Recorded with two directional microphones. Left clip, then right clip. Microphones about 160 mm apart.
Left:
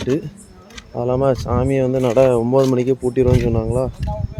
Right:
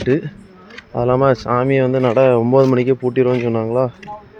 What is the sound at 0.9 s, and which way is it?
Speech, centre (ahead or behind).